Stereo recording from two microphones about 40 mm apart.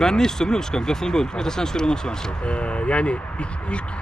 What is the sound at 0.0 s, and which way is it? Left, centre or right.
Speech, centre.